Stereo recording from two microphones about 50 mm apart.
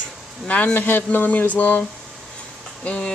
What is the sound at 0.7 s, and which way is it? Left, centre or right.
A woman's voice, left.